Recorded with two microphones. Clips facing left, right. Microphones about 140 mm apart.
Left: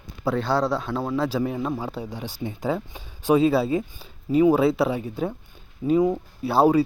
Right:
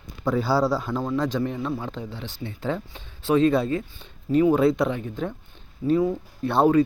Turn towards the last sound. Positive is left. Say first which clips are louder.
# even
turn(degrees=5)  # may be behind; listen again after turning